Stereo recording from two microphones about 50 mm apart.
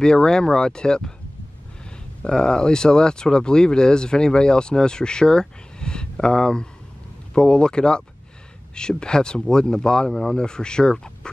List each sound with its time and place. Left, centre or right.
0.0 s speech: centre
2.2 s speech: centre